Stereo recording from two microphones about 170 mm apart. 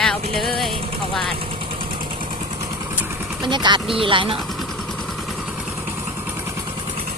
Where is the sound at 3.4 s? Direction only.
25° right (ahead or behind).